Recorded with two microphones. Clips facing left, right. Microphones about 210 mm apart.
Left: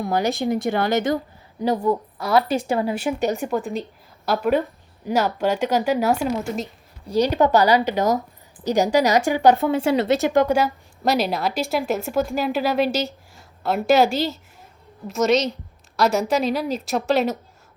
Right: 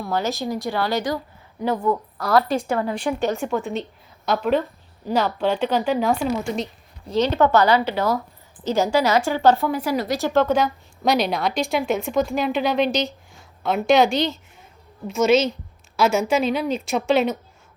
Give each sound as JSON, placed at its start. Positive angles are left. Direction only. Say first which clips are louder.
{"t": 0.0, "sound": "a woman's voice", "louder": "left 3 dB", "side_deg": 15}
{"t": 1.6, "sound": "a woman's voice", "louder": "left 2 dB", "side_deg": 30}
{"t": 2.1, "sound": "a woman's voice", "louder": "even", "side_deg": 0}
{"t": 9.6, "sound": "a woman's voice", "louder": "left 4 dB", "side_deg": 25}